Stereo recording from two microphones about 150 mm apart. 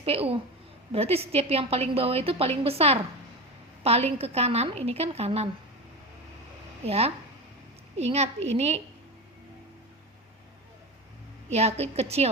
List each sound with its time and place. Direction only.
0.0 s a woman's voice: 40° right (ahead or behind)
6.8 s a woman's voice: 40° right (ahead or behind)
11.5 s a woman's voice: 45° right (ahead or behind)